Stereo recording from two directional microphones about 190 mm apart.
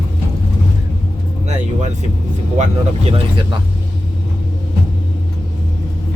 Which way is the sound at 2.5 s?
35° right (ahead or behind).